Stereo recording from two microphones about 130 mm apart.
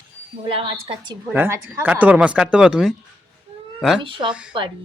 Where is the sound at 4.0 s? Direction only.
40° right (ahead or behind).